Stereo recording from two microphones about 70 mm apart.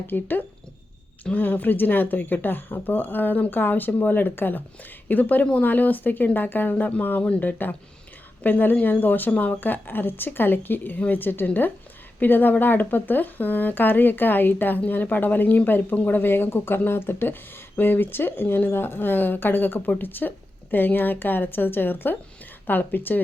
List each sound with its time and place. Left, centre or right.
0.1 s speech: left